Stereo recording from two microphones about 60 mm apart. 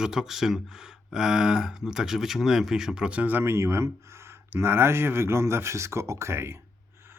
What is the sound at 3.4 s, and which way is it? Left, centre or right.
Speech, right.